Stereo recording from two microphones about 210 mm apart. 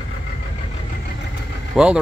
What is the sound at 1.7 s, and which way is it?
Speech, 5° right (ahead or behind).